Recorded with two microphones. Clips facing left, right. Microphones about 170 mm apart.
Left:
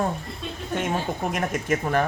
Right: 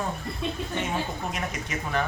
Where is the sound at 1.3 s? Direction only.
50° left (ahead or behind).